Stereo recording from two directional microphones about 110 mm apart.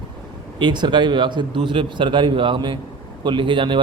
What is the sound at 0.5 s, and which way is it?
A man's voice, 45° right (ahead or behind).